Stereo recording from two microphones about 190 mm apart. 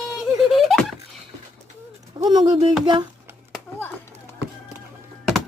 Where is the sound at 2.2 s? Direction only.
20° right (ahead or behind).